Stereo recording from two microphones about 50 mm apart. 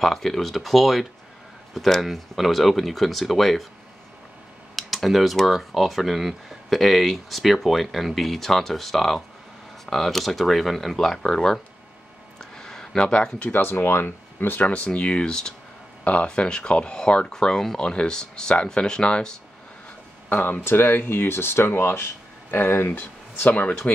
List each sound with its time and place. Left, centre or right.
0.0 s speech: centre
4.7 s speech: centre
12.4 s a sound: centre
13.5 s speech: left
14.7 s speech: left
16.0 s speech: left
20.2 s speech: left
20.6 s speech: left
23.4 s speech: left